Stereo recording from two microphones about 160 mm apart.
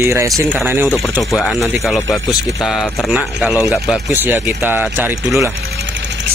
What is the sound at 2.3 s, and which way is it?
Speech, centre (ahead or behind).